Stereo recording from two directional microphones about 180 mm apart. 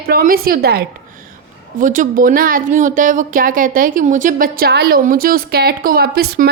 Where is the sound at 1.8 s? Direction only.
45° right (ahead or behind).